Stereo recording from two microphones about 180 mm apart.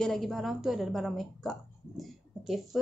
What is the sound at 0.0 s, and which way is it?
A woman's voice, centre (ahead or behind).